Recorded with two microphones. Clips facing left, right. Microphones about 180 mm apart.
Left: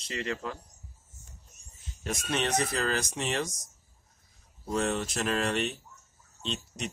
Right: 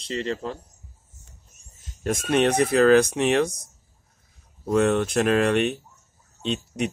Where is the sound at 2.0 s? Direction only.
50° right (ahead or behind).